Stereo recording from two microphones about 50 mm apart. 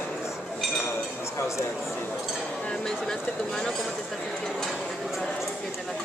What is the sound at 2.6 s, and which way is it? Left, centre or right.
Speech, centre.